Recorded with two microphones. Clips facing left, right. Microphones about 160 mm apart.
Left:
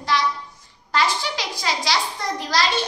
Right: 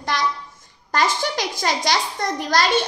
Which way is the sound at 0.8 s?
45° right (ahead or behind).